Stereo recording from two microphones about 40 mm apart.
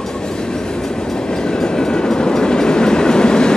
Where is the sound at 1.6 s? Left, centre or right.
Centre.